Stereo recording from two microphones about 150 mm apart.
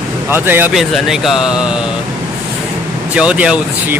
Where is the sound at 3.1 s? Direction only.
5° right (ahead or behind).